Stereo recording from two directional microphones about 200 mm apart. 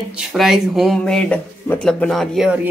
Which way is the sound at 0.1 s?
Centre (ahead or behind).